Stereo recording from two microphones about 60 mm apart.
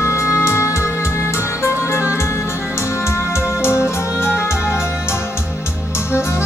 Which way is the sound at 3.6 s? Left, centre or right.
Left.